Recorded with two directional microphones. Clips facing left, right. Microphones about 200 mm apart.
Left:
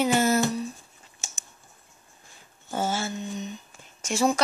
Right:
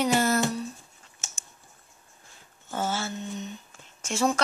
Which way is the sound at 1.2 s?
10° left (ahead or behind).